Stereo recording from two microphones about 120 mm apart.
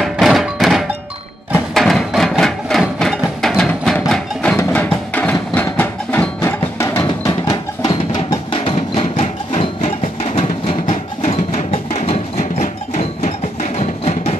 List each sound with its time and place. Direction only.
0.0 s music: centre (ahead or behind); by 7.3 s 20° left (ahead or behind)
7.8 s music: 35° left (ahead or behind)
8.9 s music: 60° left (ahead or behind)